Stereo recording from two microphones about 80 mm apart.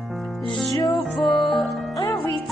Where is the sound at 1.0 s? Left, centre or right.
Centre.